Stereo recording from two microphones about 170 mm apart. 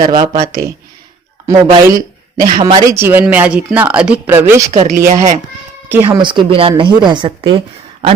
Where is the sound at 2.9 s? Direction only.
15° right (ahead or behind).